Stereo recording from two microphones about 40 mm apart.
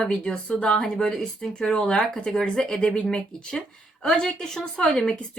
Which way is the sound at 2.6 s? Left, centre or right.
Left.